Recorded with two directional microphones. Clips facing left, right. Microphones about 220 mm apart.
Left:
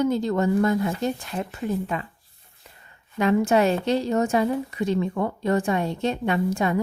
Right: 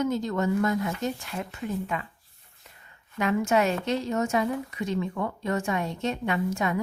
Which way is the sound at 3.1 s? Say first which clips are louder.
Left 4 dB; 35° left (ahead or behind).